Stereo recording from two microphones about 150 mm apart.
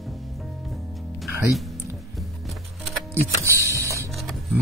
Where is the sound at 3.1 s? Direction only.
15° right (ahead or behind).